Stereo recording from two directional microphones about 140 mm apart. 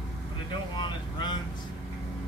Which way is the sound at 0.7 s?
30° left (ahead or behind).